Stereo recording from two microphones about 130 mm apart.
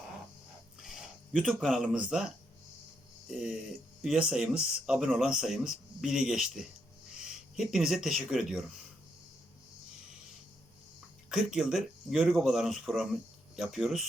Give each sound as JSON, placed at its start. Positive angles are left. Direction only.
{"t": 0.8, "sound": "speech", "side_deg": 0}
{"t": 11.3, "sound": "speech", "side_deg": -5}